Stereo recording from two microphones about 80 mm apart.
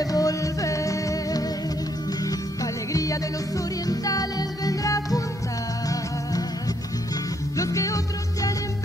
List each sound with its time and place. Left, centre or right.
0.0 s music: left
7.5 s music: left